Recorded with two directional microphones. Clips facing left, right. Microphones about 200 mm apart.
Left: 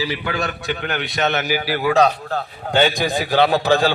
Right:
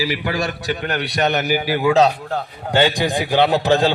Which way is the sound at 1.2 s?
15° right (ahead or behind).